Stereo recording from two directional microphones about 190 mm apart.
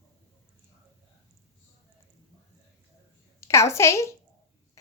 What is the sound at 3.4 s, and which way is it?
Speech, 15° left (ahead or behind).